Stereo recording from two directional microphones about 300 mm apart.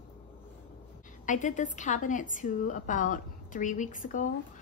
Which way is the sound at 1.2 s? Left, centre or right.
Left.